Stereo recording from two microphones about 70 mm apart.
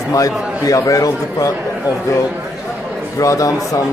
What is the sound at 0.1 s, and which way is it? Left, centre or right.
A man's voice, left.